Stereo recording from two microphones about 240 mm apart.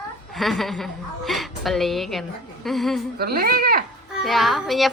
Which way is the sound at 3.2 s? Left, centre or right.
Right.